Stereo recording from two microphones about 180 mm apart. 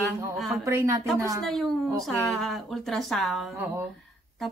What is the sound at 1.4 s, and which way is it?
Speech, centre (ahead or behind).